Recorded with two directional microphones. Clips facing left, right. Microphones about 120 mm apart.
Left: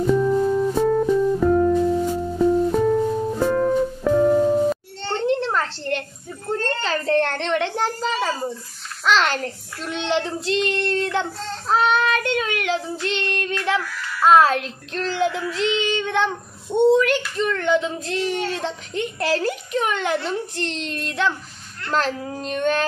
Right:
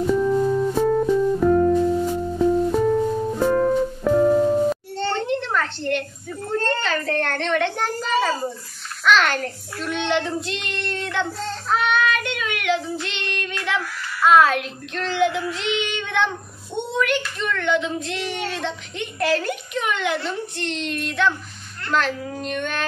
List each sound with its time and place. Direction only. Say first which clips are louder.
0.0 s music: left 1 dB; centre (ahead or behind)
5.5 s a sound: right 1 dB; 30° left (ahead or behind)
9.0 s child singing: right 1 dB; 30° left (ahead or behind)
17.4 s speech: left 4 dB; 35° left (ahead or behind)